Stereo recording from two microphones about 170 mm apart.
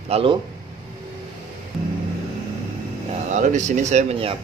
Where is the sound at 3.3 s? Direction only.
45° right (ahead or behind).